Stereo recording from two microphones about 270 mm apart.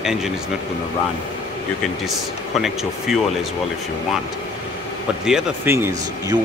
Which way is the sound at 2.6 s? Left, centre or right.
Centre.